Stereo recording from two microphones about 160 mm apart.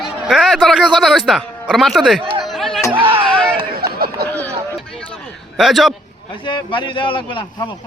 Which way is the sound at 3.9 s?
70° right (ahead or behind).